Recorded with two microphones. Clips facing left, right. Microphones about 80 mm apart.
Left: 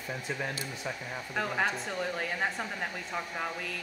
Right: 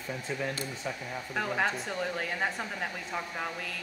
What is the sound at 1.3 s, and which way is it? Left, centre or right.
Speech, centre.